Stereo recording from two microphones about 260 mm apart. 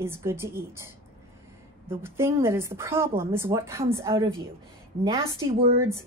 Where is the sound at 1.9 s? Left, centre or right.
Centre.